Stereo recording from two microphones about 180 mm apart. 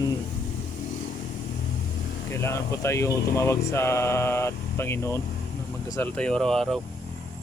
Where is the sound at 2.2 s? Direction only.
15° left (ahead or behind).